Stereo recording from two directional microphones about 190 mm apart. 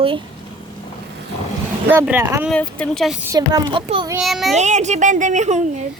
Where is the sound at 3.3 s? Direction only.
20° right (ahead or behind).